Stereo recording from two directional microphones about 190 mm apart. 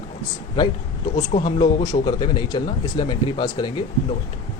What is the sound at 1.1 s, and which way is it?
Speech, 30° left (ahead or behind).